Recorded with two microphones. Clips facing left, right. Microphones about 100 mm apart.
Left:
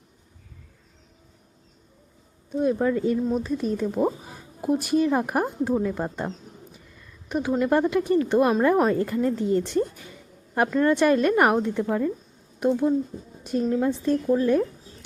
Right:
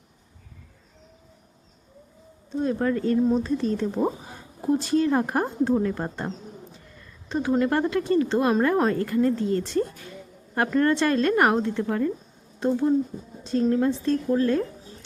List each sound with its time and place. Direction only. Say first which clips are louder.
2.5 s a woman's voice: left 2 dB; 10° left (ahead or behind)
11.8 s a woman's voice: left 1 dB; 5° left (ahead or behind)